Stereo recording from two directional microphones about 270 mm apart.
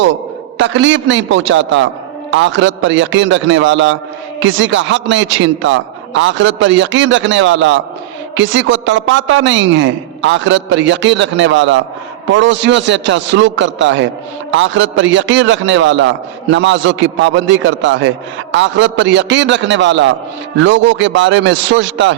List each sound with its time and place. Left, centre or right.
0.6 s a man's voice: right